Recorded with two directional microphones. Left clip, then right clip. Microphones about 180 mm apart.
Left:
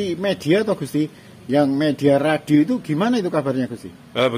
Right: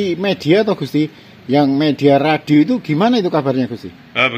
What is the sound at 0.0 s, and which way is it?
A man's voice, 45° right (ahead or behind).